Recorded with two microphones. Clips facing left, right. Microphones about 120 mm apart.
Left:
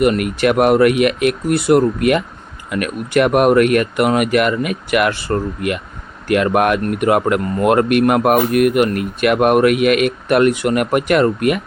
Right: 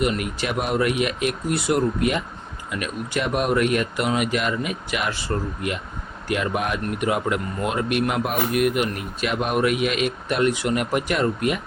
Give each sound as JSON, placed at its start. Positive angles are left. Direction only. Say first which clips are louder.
{"t": 0.0, "sound": "speech", "louder": "left 9 dB", "side_deg": 60}